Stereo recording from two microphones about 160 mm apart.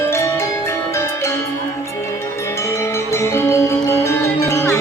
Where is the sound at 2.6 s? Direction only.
15° left (ahead or behind).